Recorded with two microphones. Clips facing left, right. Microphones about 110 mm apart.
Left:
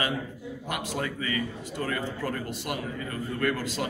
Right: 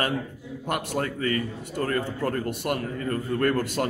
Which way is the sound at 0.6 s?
50° right (ahead or behind).